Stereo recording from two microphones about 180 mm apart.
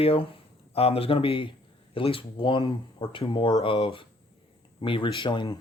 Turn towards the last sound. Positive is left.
turn(degrees=25)  # may be behind; listen again after turning